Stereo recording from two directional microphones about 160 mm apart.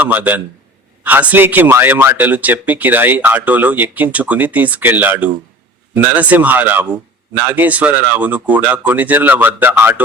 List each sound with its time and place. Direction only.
0.0 s a man's voice: 10° right (ahead or behind)